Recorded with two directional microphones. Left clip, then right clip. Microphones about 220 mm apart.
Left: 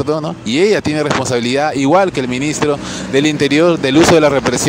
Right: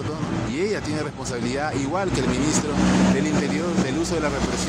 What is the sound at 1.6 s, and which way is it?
Speech, 45° left (ahead or behind).